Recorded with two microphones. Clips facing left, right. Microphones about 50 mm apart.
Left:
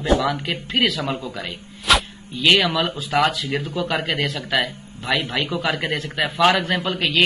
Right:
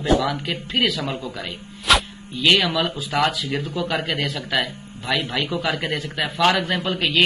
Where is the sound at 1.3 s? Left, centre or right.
Centre.